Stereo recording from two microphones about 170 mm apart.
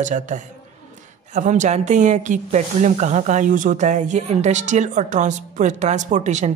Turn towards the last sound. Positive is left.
turn(degrees=-45)  # may be behind; listen again after turning